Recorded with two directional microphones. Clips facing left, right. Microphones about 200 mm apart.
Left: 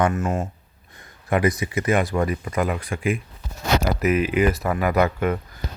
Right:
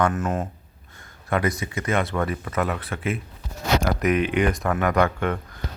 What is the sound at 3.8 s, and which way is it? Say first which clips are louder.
Speech: left 1 dB; 5° left (ahead or behind).